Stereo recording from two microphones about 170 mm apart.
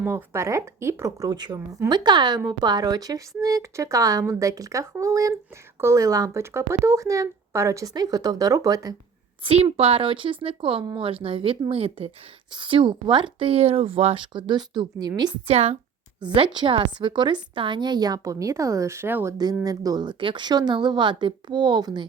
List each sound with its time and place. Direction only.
0.0 s speech: 10° right (ahead or behind)
9.4 s speech: 35° right (ahead or behind)
15.4 s speech: 35° right (ahead or behind)